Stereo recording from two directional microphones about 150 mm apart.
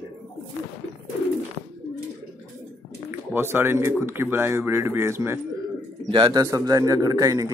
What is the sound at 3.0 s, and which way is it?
A man's voice, 15° right (ahead or behind).